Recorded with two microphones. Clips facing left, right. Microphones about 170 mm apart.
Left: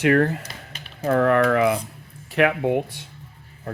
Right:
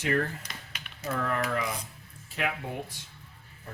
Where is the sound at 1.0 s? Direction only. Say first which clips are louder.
Left 13 dB; 65° left (ahead or behind).